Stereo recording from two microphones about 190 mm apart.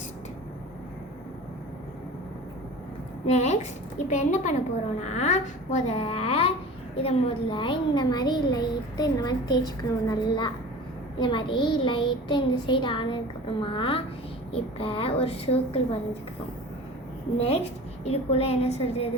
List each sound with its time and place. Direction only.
3.2 s a child's voice: 35° left (ahead or behind)
17.3 s speech: 30° left (ahead or behind)